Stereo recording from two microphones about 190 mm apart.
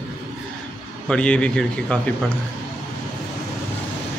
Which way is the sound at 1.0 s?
5° left (ahead or behind).